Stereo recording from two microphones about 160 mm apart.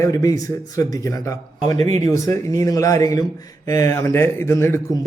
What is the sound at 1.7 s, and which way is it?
Speech, 45° right (ahead or behind).